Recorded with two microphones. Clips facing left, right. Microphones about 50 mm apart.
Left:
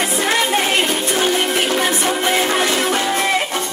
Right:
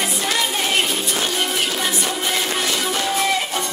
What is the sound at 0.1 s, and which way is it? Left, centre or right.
Music, left.